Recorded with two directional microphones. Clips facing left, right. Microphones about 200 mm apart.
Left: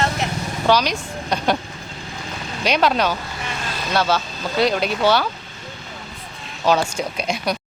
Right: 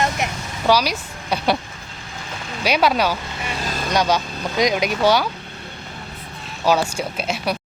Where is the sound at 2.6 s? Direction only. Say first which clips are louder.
Even; 10° right (ahead or behind).